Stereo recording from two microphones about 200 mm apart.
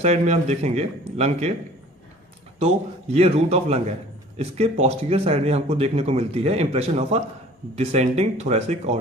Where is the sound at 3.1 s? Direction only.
30° right (ahead or behind).